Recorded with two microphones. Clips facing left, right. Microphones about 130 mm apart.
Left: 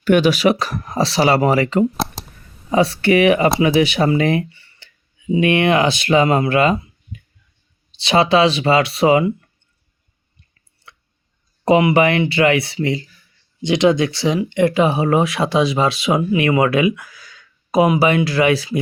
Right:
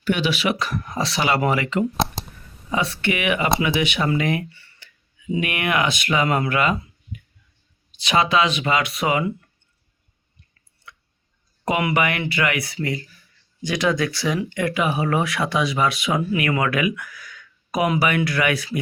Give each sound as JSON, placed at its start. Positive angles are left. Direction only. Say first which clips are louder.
{"t": 0.0, "sound": "speech", "louder": "left 8 dB", "side_deg": 45}
{"t": 2.0, "sound": "a sound", "louder": "even", "side_deg": 0}
{"t": 2.6, "sound": "speech", "louder": "left 8 dB", "side_deg": 35}
{"t": 4.1, "sound": "tick-tock", "louder": "left 5 dB", "side_deg": 30}
{"t": 5.4, "sound": "speech", "louder": "left 8 dB", "side_deg": 30}
{"t": 7.9, "sound": "speech", "louder": "left 5 dB", "side_deg": 30}
{"t": 10.9, "sound": "a sound", "louder": "even", "side_deg": 30}
{"t": 11.6, "sound": "speech", "louder": "left 8 dB", "side_deg": 30}